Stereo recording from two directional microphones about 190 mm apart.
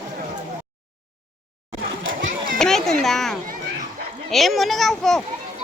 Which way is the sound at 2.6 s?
Centre (ahead or behind).